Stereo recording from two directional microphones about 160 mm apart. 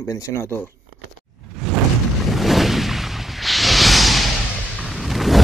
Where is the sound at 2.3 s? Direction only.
Centre (ahead or behind).